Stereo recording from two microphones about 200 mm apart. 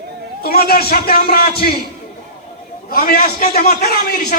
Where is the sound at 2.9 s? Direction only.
45° left (ahead or behind).